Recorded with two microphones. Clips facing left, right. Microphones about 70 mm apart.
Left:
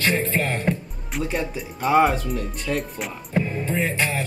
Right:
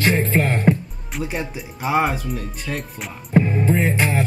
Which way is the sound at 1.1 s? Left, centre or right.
Centre.